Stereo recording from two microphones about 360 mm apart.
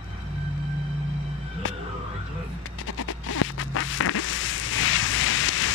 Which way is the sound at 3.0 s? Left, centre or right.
Left.